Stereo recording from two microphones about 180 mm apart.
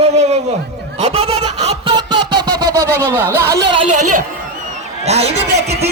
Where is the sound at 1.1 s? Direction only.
35° right (ahead or behind).